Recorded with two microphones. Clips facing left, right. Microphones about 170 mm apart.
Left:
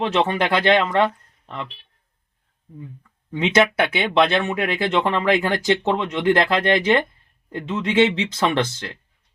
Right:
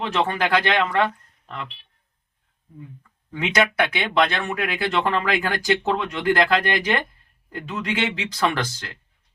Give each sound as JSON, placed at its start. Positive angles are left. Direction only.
{"t": 0.1, "sound": "speech", "side_deg": 20}
{"t": 3.3, "sound": "speech", "side_deg": 20}